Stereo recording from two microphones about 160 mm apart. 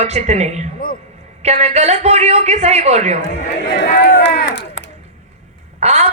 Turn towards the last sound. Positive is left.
turn(degrees=-45)  # may be behind; listen again after turning